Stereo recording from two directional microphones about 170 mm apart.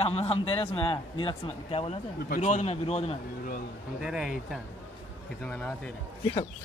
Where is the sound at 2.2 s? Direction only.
45° left (ahead or behind).